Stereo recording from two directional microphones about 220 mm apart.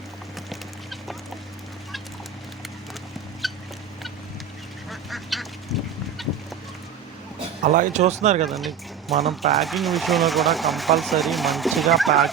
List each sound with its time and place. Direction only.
0.5 s clip-clop: centre (ahead or behind)
3.4 s fowl: centre (ahead or behind)
4.9 s duck: centre (ahead or behind)
6.2 s fowl: centre (ahead or behind)
7.6 s speech: 35° right (ahead or behind)
8.4 s speech: centre (ahead or behind)